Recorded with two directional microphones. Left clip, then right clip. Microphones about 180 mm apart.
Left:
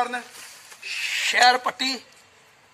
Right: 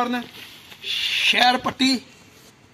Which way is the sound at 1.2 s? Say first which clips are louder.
Even; 20° right (ahead or behind).